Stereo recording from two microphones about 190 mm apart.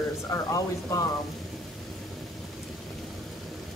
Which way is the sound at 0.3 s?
15° left (ahead or behind).